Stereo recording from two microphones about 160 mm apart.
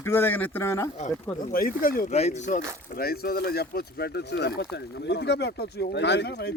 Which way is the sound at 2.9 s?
70° left (ahead or behind).